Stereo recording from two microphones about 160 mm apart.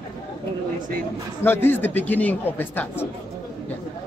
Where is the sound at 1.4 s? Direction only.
15° left (ahead or behind).